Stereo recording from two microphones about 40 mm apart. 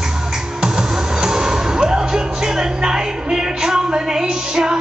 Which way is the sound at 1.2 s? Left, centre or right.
Centre.